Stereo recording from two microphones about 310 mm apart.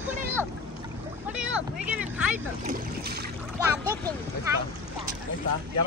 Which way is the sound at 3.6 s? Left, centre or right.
Centre.